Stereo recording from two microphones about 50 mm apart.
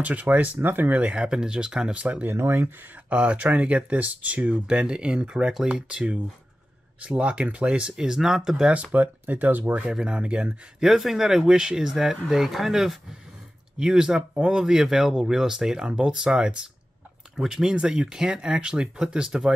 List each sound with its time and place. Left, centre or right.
0.0 s speech: right
1.1 s speech: centre
2.3 s speech: right
3.1 s speech: right
4.6 s speech: centre
7.9 s speech: centre
8.9 s speech: right
9.9 s speech: centre
10.8 s speech: centre